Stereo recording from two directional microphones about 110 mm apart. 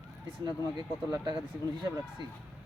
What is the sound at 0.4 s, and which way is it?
Speech, 40° right (ahead or behind).